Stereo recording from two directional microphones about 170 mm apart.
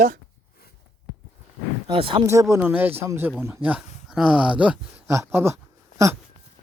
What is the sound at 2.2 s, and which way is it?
Speech, 15° right (ahead or behind).